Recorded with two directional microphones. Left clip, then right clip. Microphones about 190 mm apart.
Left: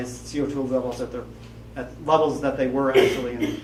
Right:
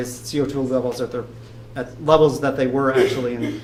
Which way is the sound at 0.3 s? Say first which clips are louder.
Right 4 dB; 45° right (ahead or behind).